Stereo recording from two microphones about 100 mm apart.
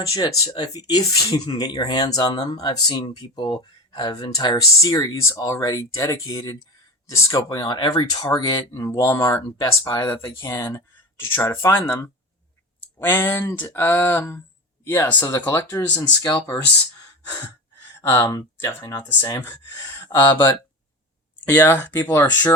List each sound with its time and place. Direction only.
0.1 s speech: 35° left (ahead or behind)
7.6 s speech: 45° left (ahead or behind); by 9.4 s 30° left (ahead or behind)
9.6 s speech: 40° left (ahead or behind)
11.3 s speech: 25° left (ahead or behind)
18.0 s speech: 25° left (ahead or behind)
18.3 s speech: 40° left (ahead or behind)
19.2 s speech: 25° left (ahead or behind)
20.1 s speech: 50° left (ahead or behind)
21.4 s speech: 20° left (ahead or behind)